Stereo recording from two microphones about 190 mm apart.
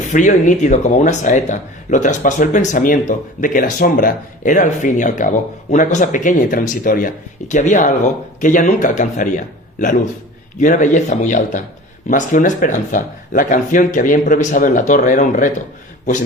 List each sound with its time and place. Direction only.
0.1 s speech: 40° left (ahead or behind)